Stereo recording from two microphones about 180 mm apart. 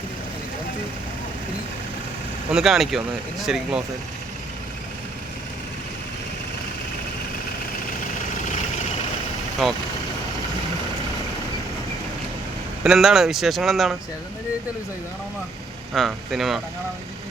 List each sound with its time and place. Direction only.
2.5 s speech: 5° right (ahead or behind)
9.6 s speech: centre (ahead or behind)
12.8 s speech: 5° right (ahead or behind)
16.0 s speech: centre (ahead or behind)